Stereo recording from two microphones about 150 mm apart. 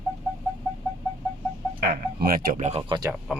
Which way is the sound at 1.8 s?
90° right.